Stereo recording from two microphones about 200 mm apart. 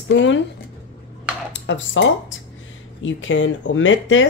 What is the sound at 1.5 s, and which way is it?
Dishes, 65° left (ahead or behind).